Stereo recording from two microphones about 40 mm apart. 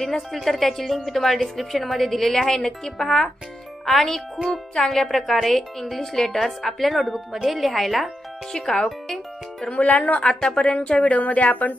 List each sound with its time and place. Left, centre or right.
0.1 s speech: centre
3.8 s speech: centre
6.1 s a woman's voice: centre
6.4 s speech: centre
8.7 s speech: centre
9.7 s speech: left
10.2 s a woman's voice: centre
11.0 s speech: left